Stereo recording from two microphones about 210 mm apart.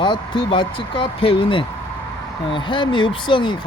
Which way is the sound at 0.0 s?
20° left (ahead or behind).